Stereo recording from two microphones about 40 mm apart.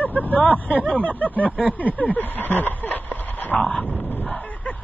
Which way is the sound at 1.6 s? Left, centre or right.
Right.